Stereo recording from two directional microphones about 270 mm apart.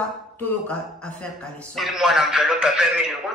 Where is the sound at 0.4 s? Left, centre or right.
Centre.